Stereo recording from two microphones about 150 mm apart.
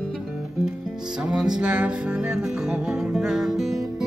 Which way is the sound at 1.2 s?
5° right (ahead or behind).